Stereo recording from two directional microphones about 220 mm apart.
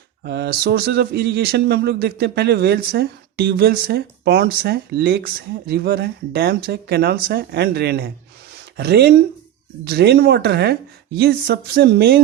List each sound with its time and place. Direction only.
0.3 s speech: 50° right (ahead or behind)